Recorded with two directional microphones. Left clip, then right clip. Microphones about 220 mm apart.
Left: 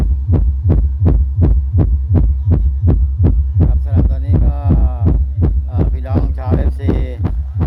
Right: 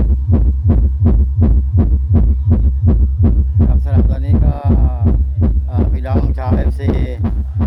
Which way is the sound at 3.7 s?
20° right (ahead or behind).